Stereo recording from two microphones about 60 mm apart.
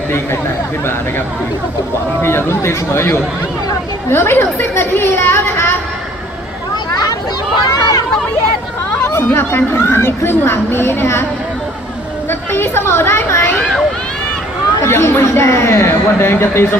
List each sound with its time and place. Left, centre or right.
2.2 s speech: left
7.7 s a sound: left
9.0 s chatter: left
9.4 s speech: left
12.3 s speech: left
14.8 s speech: left